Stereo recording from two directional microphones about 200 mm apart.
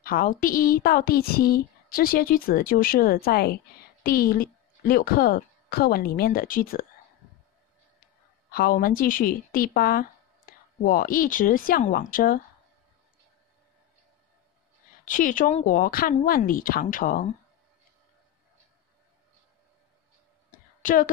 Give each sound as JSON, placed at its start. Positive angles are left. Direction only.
{"t": 0.0, "sound": "speech", "side_deg": 45}
{"t": 8.5, "sound": "a woman's voice", "side_deg": 50}
{"t": 15.0, "sound": "speech", "side_deg": 40}
{"t": 20.5, "sound": "a sound", "side_deg": 45}